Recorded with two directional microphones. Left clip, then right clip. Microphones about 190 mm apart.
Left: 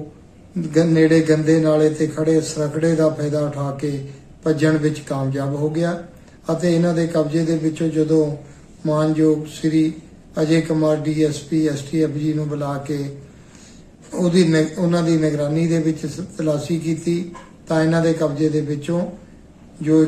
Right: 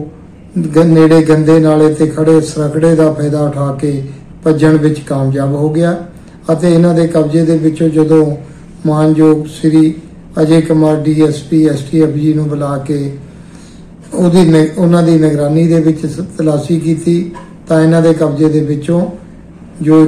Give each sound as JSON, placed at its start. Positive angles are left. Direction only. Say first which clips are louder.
{"t": 0.6, "sound": "a man's voice", "louder": "right 8 dB", "side_deg": 0}
{"t": 14.2, "sound": "a man's voice", "louder": "right 8 dB", "side_deg": 0}